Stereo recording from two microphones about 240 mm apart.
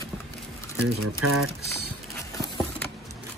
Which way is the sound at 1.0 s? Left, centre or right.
Right.